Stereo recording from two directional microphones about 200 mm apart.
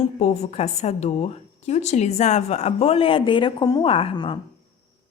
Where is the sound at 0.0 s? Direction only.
35° left (ahead or behind).